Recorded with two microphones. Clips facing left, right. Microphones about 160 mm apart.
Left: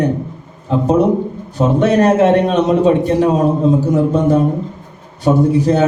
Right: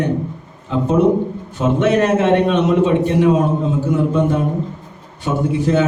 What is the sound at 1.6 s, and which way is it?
A man's voice, 35° left (ahead or behind).